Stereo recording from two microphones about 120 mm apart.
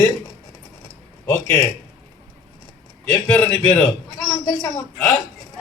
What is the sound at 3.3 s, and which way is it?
A man's voice, 15° left (ahead or behind).